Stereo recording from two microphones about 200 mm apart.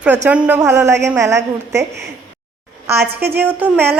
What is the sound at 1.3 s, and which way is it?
Speech, 60° right (ahead or behind).